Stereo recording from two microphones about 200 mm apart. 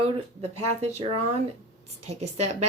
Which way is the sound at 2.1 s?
30° right (ahead or behind).